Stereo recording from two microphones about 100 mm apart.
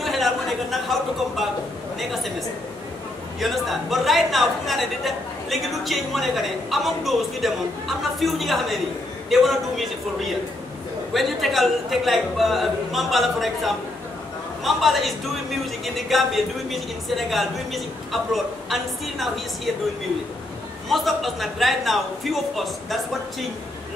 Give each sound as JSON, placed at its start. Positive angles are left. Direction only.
{"t": 0.0, "sound": "speech", "side_deg": 0}
{"t": 3.3, "sound": "speech", "side_deg": 0}
{"t": 20.9, "sound": "speech", "side_deg": 0}